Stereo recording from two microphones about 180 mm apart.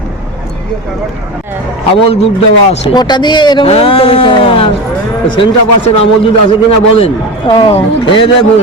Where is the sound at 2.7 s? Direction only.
25° left (ahead or behind).